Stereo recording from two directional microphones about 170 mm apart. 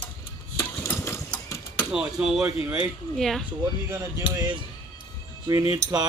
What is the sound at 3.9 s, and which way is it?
Speech, 15° right (ahead or behind).